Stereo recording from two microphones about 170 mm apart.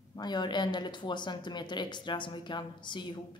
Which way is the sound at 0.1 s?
25° left (ahead or behind).